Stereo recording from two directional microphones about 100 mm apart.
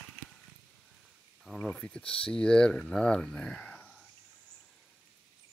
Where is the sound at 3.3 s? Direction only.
10° left (ahead or behind).